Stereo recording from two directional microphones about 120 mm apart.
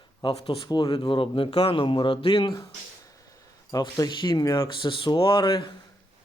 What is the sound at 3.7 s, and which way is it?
Speech, 35° left (ahead or behind).